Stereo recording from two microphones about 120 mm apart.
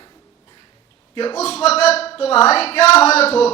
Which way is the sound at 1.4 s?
60° left (ahead or behind).